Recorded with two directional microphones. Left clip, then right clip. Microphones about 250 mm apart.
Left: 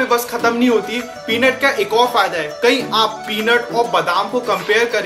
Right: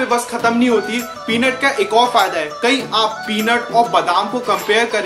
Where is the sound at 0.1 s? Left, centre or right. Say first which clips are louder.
Even; centre.